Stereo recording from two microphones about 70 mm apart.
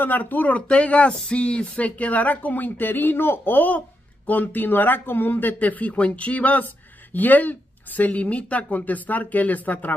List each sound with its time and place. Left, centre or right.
0.0 s speech: left
1.1 s a sound: centre
1.4 s speech: centre